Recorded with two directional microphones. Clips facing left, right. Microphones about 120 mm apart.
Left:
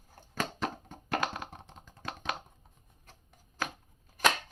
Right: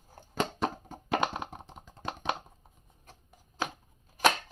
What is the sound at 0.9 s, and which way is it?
Computer keyboard, 20° right (ahead or behind).